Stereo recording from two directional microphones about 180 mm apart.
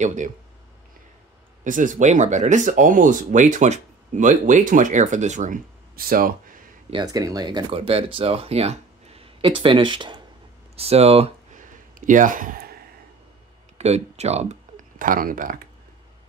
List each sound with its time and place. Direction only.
0.0 s speech: 40° right (ahead or behind)
1.6 s speech: 45° right (ahead or behind)
6.9 s speech: 20° right (ahead or behind)
10.8 s a sound: 35° right (ahead or behind); by 12.7 s 50° right (ahead or behind)
13.7 s speech: 35° right (ahead or behind)